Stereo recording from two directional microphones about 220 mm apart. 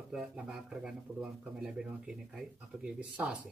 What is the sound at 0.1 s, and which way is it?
Speech, 5° right (ahead or behind).